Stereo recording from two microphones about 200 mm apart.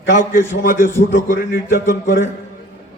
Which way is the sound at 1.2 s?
45° left (ahead or behind).